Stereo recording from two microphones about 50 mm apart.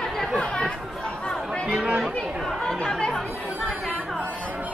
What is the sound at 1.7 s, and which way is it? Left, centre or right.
Speech, centre.